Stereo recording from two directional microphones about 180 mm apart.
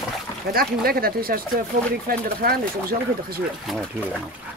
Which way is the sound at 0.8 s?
55° right (ahead or behind).